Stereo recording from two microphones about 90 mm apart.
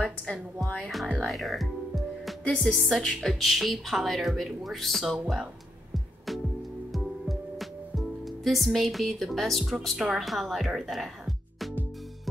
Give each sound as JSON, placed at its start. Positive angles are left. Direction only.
{"t": 0.0, "sound": "a woman's voice", "side_deg": 10}
{"t": 1.2, "sound": "music", "side_deg": 0}
{"t": 2.4, "sound": "a woman's voice", "side_deg": 10}
{"t": 6.9, "sound": "music", "side_deg": 0}
{"t": 8.5, "sound": "a woman's voice", "side_deg": 0}